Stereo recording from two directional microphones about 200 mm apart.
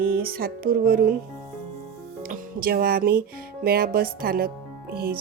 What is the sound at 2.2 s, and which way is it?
Speech, 45° right (ahead or behind).